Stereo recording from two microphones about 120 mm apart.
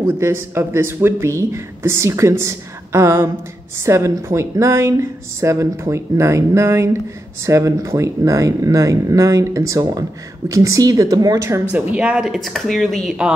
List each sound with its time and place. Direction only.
0.0 s speech: 20° right (ahead or behind)
11.7 s speech: 15° right (ahead or behind)